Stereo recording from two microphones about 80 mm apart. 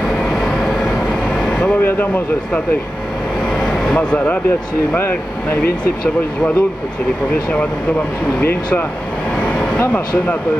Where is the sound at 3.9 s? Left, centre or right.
Centre.